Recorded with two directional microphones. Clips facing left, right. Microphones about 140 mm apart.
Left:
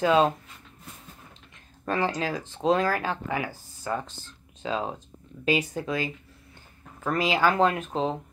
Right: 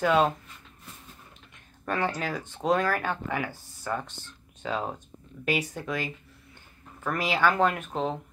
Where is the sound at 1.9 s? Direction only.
25° left (ahead or behind).